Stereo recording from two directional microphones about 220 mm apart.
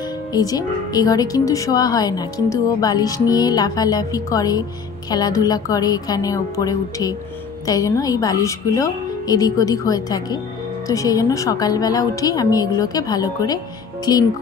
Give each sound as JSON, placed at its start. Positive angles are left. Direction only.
{"t": 0.3, "sound": "a woman's voice", "side_deg": 15}